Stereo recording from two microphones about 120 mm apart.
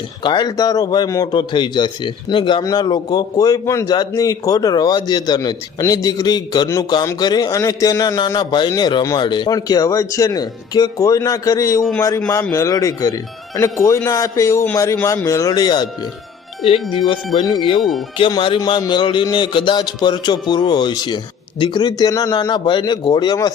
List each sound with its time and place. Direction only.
0.2 s a man's voice: 40° left (ahead or behind)
16.6 s a man's voice: 50° left (ahead or behind)
17.7 s speech: centre (ahead or behind)
18.2 s a man's voice: 45° left (ahead or behind)